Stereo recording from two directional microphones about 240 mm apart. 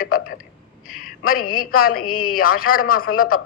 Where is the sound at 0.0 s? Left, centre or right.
Left.